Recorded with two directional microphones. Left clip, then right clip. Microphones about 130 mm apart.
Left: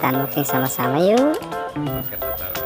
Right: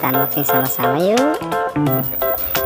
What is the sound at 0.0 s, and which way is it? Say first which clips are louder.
Music: right 2 dB; centre (ahead or behind).